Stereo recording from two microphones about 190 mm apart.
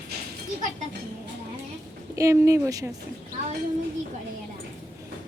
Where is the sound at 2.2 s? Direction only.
15° right (ahead or behind).